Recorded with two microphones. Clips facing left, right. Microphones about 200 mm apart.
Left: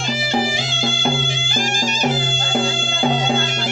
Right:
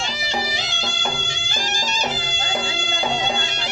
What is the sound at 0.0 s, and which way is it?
Music, 50° left (ahead or behind).